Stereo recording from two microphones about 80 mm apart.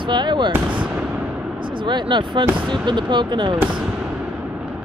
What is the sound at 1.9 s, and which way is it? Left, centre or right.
Speech, right.